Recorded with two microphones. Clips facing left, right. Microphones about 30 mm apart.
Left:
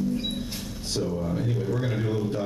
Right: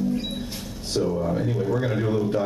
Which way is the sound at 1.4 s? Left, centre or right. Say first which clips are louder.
Right 4 dB; centre.